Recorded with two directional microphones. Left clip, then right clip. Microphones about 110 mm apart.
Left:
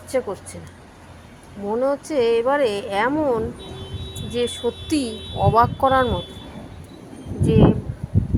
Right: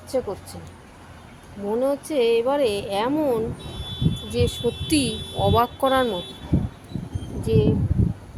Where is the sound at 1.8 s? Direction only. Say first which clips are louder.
Left 2 dB; 5° right (ahead or behind).